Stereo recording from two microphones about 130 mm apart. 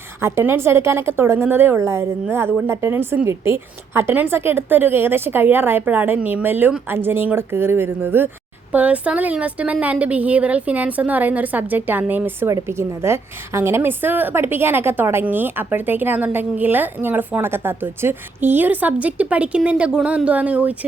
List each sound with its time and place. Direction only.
0.2 s a woman's voice: 20° right (ahead or behind)